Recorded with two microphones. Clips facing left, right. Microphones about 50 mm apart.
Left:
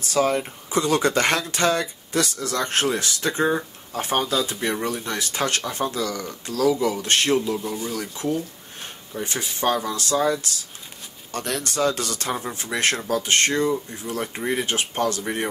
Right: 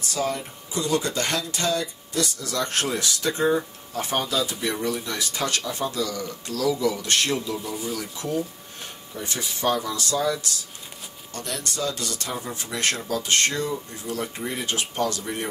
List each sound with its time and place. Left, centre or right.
0.1 s speech: left
2.5 s speech: left
7.6 s speech: centre
7.9 s speech: left
11.3 s speech: left
12.6 s speech: left